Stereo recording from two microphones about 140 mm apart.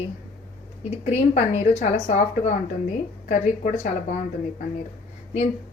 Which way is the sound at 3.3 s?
65° left (ahead or behind).